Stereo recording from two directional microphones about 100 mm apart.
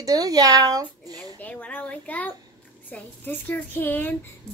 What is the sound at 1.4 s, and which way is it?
A child's voice, 15° left (ahead or behind).